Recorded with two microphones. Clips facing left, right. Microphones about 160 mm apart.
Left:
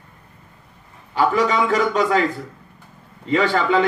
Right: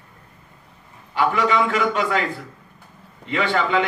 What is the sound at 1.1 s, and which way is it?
Speech, 40° left (ahead or behind).